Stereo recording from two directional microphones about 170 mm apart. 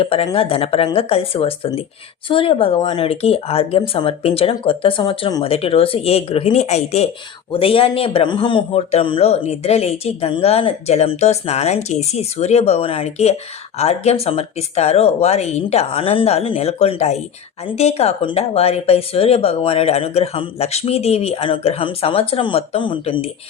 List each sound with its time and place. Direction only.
0.0 s a man's voice: 35° left (ahead or behind)